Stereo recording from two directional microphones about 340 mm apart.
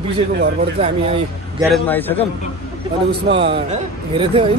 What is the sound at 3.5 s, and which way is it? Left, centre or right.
Speech, centre.